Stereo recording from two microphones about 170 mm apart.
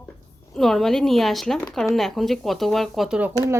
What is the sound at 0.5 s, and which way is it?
A woman's voice, centre (ahead or behind).